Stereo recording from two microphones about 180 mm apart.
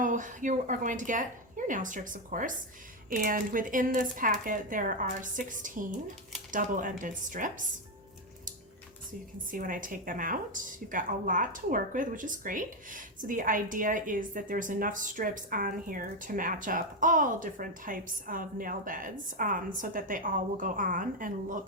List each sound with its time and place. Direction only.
0.0 s a woman's voice: 45° right (ahead or behind)
9.5 s a woman's voice: 50° right (ahead or behind)